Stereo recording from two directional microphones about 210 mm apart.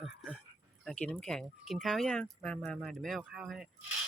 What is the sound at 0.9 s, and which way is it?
Speech, 5° left (ahead or behind).